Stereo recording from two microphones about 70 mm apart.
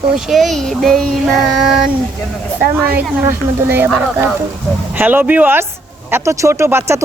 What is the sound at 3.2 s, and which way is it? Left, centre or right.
Speech, right.